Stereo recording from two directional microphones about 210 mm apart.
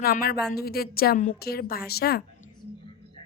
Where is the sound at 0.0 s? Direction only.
45° left (ahead or behind).